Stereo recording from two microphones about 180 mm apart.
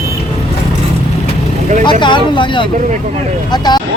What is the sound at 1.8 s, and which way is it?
Speech, 25° left (ahead or behind).